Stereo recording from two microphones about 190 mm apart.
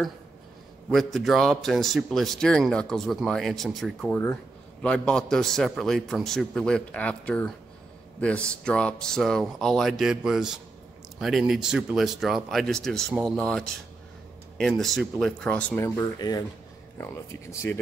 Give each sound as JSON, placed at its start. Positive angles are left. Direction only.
{"t": 0.8, "sound": "a man's voice", "side_deg": 0}